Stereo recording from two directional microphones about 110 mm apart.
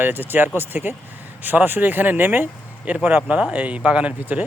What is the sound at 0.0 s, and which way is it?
Speech, 20° right (ahead or behind).